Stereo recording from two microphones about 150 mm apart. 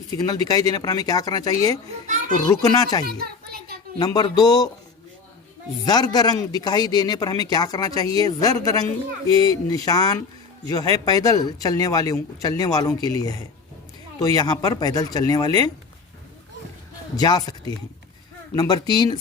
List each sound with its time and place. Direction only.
0.1 s a man's voice: 25° left (ahead or behind)
2.0 s a child's voice: 55° right (ahead or behind)
2.5 s a man's voice: 25° left (ahead or behind)
3.1 s a sound: 90° right
4.0 s a man's voice: 30° left (ahead or behind)
5.8 s a man's voice: 25° left (ahead or behind)
17.2 s a man's voice: 25° left (ahead or behind)